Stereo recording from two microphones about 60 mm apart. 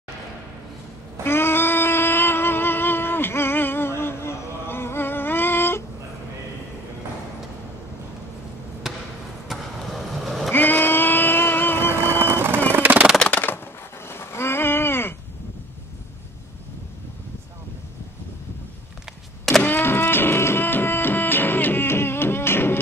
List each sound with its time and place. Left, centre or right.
1.2 s a sound: left
8.8 s basketball bounce: centre
9.5 s vehicle: centre
10.5 s vehicle: left
12.0 s vehicle: right
12.7 s a sound: right
13.3 s typewriter: left
14.0 s a sound: left
19.6 s music: left